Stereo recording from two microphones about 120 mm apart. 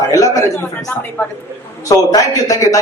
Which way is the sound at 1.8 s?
30° left (ahead or behind).